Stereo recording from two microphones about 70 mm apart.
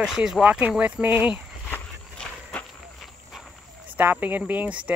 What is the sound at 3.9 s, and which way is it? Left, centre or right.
Speech, right.